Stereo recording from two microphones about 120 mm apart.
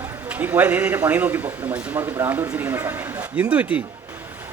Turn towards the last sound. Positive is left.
turn(degrees=-15)  # may be behind; listen again after turning